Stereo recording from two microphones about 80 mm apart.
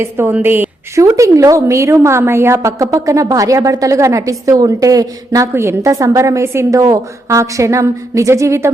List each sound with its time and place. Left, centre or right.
0.0 s a woman's voice: right
0.9 s a woman's voice: right
5.5 s a woman's voice: right